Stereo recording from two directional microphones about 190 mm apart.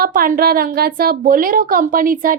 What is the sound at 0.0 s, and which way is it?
A woman's voice, 50° right (ahead or behind).